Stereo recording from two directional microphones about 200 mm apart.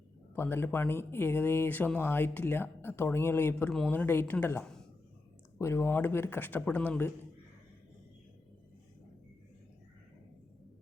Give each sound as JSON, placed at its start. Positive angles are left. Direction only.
{"t": 0.3, "sound": "speech", "side_deg": 10}